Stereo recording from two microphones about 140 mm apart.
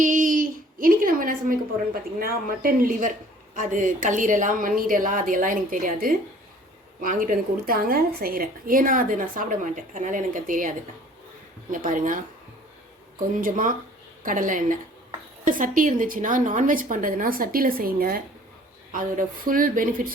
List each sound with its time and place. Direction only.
0.0 s a woman's voice: 65° right (ahead or behind); by 3.1 s 85° right
3.5 s a woman's voice: 65° right (ahead or behind)
13.4 s a woman's voice: 70° right (ahead or behind); by 18.2 s 90° right
18.9 s a woman's voice: 70° right (ahead or behind)